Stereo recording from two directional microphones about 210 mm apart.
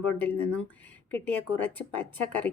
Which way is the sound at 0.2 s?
5° left (ahead or behind).